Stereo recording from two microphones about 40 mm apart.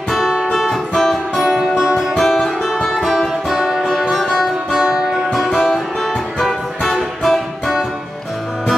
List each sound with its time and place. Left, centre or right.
0.1 s music: centre
2.2 s music: centre
3.5 s music: centre
3.8 s music: centre
4.7 s music: centre
5.7 s music: centre